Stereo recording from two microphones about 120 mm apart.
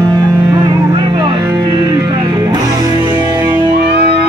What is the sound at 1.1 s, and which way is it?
Music, 35° right (ahead or behind).